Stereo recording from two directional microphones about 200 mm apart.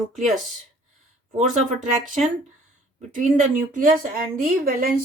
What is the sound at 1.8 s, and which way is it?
A woman's voice, 40° right (ahead or behind).